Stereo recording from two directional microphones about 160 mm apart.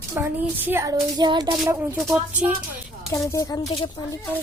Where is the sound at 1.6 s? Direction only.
10° right (ahead or behind).